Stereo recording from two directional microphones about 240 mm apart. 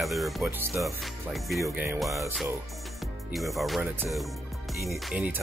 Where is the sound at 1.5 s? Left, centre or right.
Centre.